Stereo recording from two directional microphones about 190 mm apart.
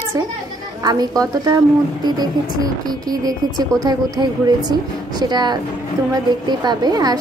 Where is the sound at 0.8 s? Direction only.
20° right (ahead or behind).